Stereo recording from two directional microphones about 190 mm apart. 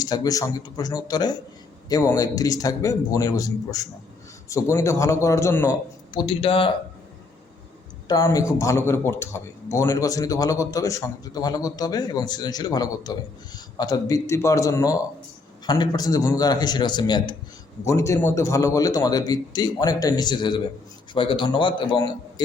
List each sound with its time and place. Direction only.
0.0 s a man's voice: 20° left (ahead or behind)
6.1 s a man's voice: 30° left (ahead or behind)
8.0 s a man's voice: 20° left (ahead or behind)